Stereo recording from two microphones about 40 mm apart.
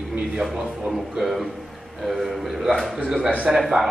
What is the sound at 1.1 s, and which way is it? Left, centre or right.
A man's voice, centre.